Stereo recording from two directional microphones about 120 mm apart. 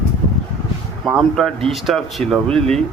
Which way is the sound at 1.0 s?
Centre (ahead or behind).